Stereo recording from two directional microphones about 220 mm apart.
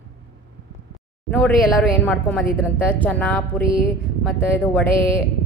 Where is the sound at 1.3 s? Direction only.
5° left (ahead or behind).